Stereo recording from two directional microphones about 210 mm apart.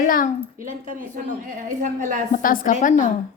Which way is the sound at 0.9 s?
40° right (ahead or behind).